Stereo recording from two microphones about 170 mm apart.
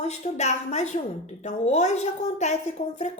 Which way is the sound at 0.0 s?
40° left (ahead or behind).